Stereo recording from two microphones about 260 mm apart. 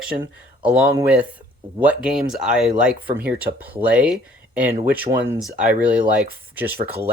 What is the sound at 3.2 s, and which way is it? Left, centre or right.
Speech, right.